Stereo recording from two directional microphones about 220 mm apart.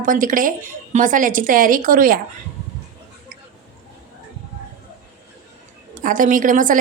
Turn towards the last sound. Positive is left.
turn(degrees=-35)  # may be behind; listen again after turning